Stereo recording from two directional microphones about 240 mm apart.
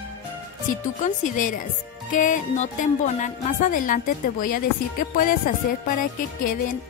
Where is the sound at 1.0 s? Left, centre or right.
Left.